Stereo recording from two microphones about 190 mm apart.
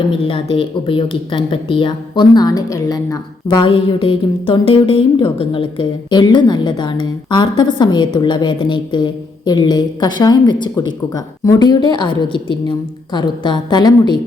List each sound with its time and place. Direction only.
0.1 s speech: 25° left (ahead or behind)